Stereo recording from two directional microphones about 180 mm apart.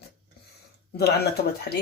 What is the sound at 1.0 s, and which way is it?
Speech, 65° left (ahead or behind).